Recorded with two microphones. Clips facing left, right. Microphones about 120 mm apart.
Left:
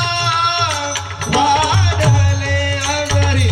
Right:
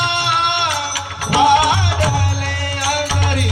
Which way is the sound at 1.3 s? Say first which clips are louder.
Right 1 dB; 50° left (ahead or behind).